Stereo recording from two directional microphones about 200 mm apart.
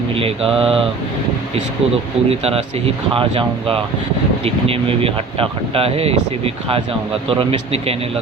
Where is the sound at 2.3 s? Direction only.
30° right (ahead or behind).